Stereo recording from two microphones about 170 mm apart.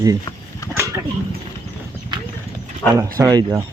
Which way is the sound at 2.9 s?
20° right (ahead or behind).